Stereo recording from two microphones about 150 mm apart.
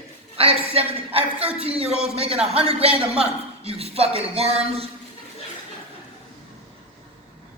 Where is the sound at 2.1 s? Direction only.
40° right (ahead or behind).